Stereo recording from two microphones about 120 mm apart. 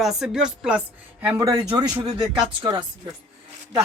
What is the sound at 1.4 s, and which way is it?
Speech, 30° right (ahead or behind).